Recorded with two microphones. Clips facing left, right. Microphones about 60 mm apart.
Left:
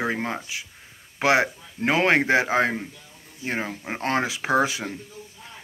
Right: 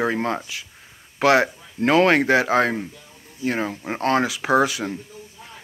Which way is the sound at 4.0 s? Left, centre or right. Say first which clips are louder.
Right 4 dB; left.